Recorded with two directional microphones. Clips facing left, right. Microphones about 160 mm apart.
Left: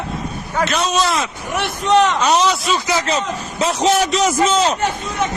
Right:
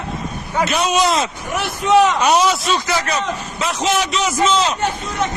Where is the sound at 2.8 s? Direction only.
20° left (ahead or behind).